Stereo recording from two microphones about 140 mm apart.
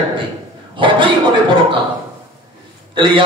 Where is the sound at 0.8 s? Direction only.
35° right (ahead or behind).